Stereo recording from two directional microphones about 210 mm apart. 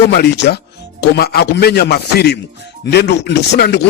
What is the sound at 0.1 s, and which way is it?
Speech, 50° left (ahead or behind).